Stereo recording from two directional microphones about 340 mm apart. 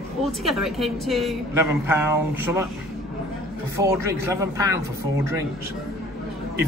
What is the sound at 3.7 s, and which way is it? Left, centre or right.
A man's voice, centre.